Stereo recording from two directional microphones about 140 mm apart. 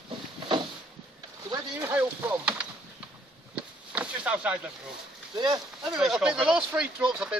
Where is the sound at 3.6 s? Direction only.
10° right (ahead or behind).